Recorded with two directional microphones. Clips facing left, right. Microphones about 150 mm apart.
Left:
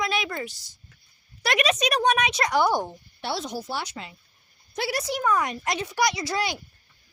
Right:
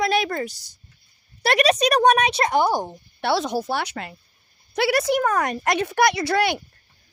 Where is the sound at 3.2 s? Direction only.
70° right (ahead or behind).